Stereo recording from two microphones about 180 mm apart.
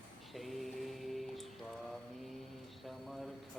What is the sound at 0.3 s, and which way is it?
Music, centre (ahead or behind).